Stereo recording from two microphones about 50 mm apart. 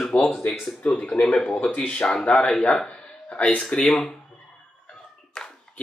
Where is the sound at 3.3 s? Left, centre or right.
Left.